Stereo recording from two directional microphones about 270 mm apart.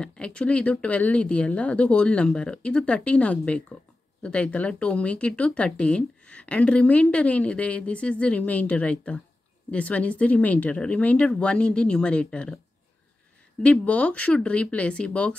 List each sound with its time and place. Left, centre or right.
0.0 s speech: centre
13.6 s speech: centre